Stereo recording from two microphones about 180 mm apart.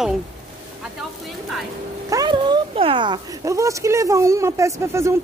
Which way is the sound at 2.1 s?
25° right (ahead or behind).